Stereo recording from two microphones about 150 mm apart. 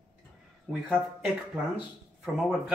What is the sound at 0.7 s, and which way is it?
Speech, 5° right (ahead or behind).